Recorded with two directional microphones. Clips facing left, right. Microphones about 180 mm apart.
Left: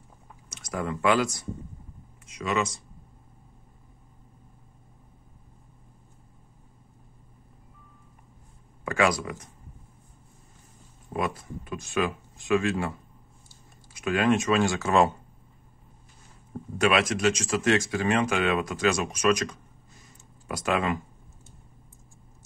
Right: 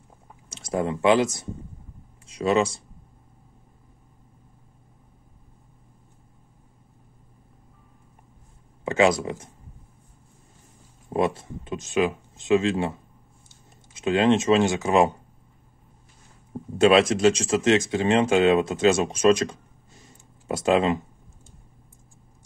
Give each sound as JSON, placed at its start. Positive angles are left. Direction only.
{"t": 0.5, "sound": "speech", "side_deg": -30}
{"t": 8.8, "sound": "speech", "side_deg": -25}
{"t": 11.1, "sound": "speech", "side_deg": -25}
{"t": 16.5, "sound": "speech", "side_deg": -25}